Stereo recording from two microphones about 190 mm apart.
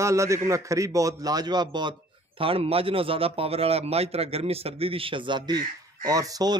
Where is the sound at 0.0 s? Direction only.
15° right (ahead or behind).